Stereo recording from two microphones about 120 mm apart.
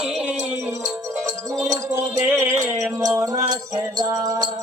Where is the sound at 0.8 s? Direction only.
30° right (ahead or behind).